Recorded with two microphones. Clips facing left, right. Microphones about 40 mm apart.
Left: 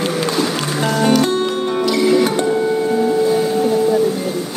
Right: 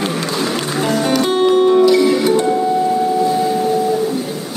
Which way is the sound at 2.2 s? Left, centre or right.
Left.